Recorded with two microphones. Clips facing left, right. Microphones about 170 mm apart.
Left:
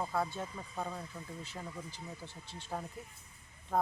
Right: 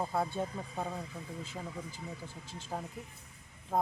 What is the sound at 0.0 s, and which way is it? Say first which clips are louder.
Speech: right 2 dB; 25° right (ahead or behind).